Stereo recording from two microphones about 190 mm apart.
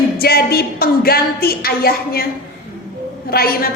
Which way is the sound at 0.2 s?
55° left (ahead or behind).